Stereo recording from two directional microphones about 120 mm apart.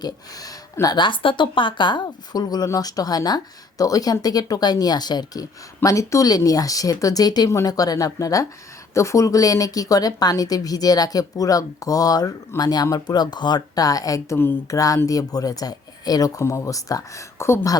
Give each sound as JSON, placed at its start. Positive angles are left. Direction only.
{"t": 0.0, "sound": "a woman's voice", "side_deg": 30}
{"t": 14.3, "sound": "a woman's voice", "side_deg": 20}